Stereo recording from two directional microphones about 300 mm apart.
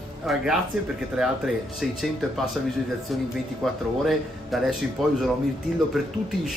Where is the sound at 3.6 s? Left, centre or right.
Centre.